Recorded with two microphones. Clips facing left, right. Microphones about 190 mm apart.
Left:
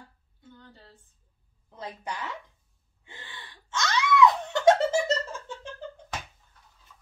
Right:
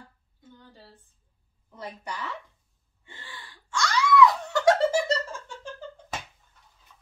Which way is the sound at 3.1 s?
25° left (ahead or behind).